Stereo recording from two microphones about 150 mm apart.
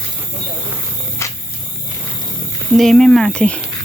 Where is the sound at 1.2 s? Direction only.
20° left (ahead or behind).